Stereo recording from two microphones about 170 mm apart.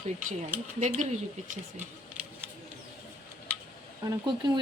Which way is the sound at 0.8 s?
45° right (ahead or behind).